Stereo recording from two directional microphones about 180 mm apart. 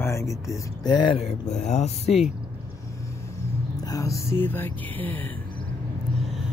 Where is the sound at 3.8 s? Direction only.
20° left (ahead or behind).